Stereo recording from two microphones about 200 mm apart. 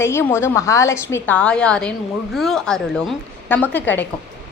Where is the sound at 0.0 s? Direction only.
10° left (ahead or behind).